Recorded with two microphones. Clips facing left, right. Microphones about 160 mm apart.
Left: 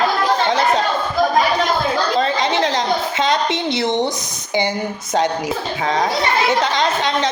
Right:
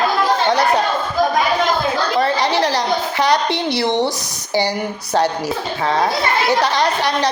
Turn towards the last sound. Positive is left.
turn(degrees=20)  # may be behind; listen again after turning